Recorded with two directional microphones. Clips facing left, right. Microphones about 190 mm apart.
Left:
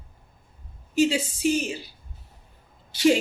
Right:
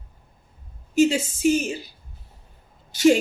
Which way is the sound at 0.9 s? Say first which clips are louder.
Right 3 dB; 45° right (ahead or behind).